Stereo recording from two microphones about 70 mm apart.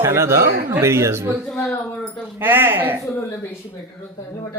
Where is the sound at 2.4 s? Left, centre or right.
Right.